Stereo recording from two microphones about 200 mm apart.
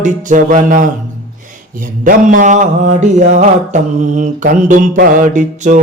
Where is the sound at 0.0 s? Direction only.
40° right (ahead or behind).